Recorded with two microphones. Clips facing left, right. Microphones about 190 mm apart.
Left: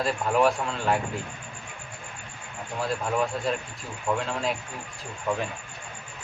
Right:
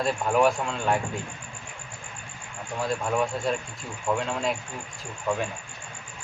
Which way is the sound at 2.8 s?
Centre (ahead or behind).